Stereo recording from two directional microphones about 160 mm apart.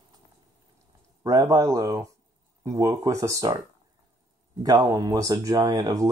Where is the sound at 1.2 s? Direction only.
20° right (ahead or behind).